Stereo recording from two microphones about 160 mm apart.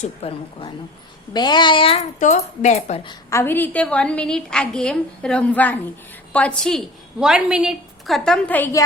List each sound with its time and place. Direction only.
0.0 s a woman's voice: 40° left (ahead or behind)
1.3 s a child's voice: 25° left (ahead or behind)
2.1 s speech: 50° left (ahead or behind)
3.1 s a woman's voice: 20° left (ahead or behind)